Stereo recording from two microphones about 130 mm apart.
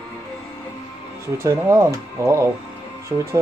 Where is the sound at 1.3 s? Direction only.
20° right (ahead or behind).